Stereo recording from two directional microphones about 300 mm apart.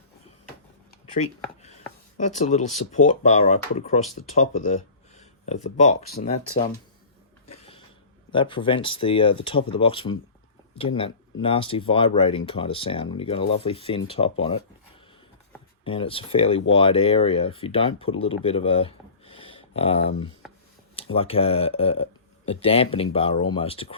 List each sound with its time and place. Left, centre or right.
1.6 s speech: left
4.3 s a sound: left
5.6 s speech: left
8.3 s speech: centre
15.8 s speech: centre